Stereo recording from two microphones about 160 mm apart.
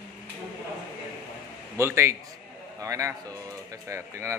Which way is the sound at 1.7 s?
15° right (ahead or behind).